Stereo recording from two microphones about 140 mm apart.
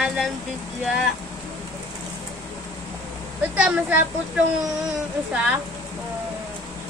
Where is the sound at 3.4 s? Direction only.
10° right (ahead or behind).